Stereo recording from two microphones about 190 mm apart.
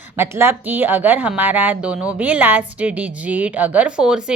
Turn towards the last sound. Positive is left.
turn(degrees=-5)  # may be behind; listen again after turning